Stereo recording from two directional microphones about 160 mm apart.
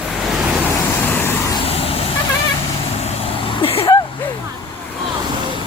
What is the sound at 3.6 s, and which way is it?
Vehicle, 35° left (ahead or behind).